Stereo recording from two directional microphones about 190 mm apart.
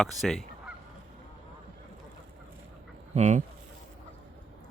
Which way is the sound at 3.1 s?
40° right (ahead or behind).